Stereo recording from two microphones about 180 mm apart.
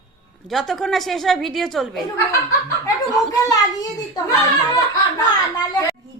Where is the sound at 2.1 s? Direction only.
20° left (ahead or behind).